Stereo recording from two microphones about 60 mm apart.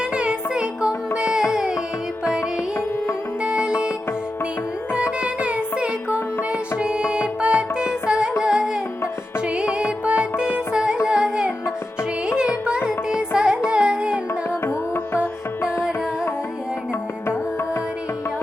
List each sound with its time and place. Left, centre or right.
0.1 s music: centre
3.4 s music: centre
5.2 s music: right
11.0 s carnatic music: centre
12.6 s music: centre
13.7 s carnatic music: centre
14.6 s music: left